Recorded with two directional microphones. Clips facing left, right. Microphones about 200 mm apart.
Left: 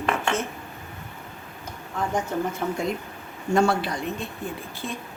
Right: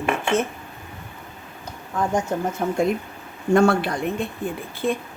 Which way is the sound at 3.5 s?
55° right (ahead or behind).